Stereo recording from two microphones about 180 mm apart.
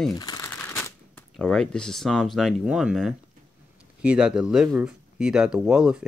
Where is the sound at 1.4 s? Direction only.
5° left (ahead or behind).